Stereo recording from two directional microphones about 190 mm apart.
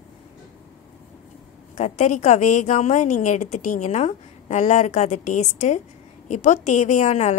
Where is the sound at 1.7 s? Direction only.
35° left (ahead or behind).